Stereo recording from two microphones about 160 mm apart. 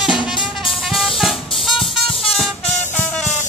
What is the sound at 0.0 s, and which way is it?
Music, 5° right (ahead or behind).